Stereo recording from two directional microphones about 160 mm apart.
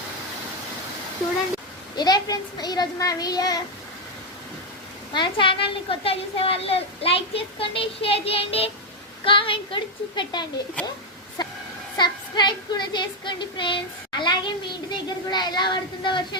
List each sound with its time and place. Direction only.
2.0 s child singing: 25° left (ahead or behind)
5.1 s a woman's voice: 30° left (ahead or behind)
11.9 s child singing: 25° left (ahead or behind)